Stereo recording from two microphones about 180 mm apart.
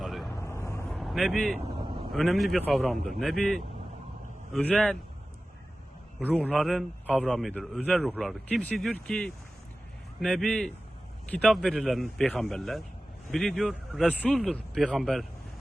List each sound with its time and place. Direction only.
0.0 s vehicle: centre (ahead or behind)
0.3 s vehicle: 15° left (ahead or behind)
0.9 s vehicle: centre (ahead or behind)
1.8 s vehicle: 25° right (ahead or behind)
2.1 s speech: centre (ahead or behind)
6.1 s speech: 5° left (ahead or behind)